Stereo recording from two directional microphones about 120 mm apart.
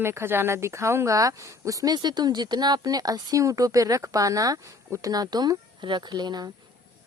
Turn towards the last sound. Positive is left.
turn(degrees=-35)  # may be behind; listen again after turning